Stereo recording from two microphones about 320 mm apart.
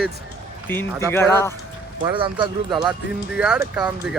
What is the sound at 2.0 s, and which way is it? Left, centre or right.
Speech, centre.